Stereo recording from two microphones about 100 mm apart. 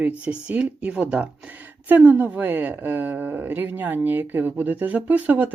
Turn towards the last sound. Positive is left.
turn(degrees=-15)  # may be behind; listen again after turning